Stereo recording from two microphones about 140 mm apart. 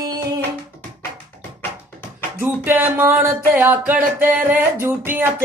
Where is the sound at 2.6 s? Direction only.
15° right (ahead or behind).